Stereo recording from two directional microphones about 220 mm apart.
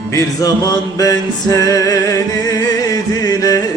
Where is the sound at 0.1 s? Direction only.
15° left (ahead or behind).